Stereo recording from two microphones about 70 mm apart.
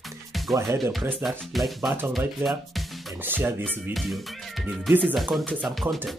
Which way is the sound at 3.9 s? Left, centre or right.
Centre.